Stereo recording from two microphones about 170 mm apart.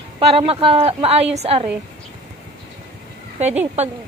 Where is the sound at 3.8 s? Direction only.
40° right (ahead or behind).